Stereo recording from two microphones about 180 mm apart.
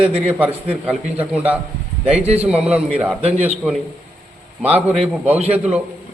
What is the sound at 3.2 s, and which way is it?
Speech, 35° right (ahead or behind).